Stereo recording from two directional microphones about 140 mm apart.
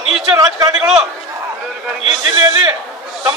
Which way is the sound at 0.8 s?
5° right (ahead or behind).